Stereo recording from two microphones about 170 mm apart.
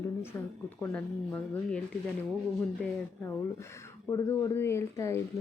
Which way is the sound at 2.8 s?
15° left (ahead or behind).